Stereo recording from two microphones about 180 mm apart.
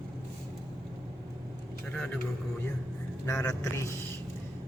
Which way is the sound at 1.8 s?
5° left (ahead or behind).